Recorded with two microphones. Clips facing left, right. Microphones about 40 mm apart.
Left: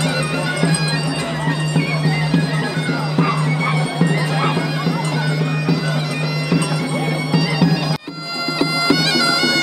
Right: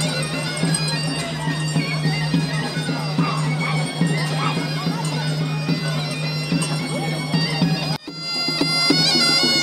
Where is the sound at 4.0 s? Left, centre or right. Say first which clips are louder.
Left 4 dB; centre.